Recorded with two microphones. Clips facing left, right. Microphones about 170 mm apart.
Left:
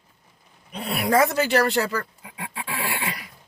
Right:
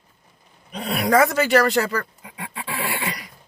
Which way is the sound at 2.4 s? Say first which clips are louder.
Right 1 dB; 25° left (ahead or behind).